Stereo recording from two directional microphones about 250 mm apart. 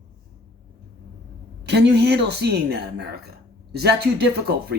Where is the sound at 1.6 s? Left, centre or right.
Right.